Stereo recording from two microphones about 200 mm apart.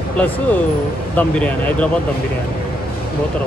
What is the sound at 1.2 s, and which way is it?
Speech, 5° left (ahead or behind).